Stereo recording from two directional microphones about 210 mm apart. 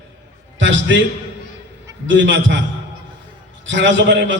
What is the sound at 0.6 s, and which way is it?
Speech, 60° right (ahead or behind).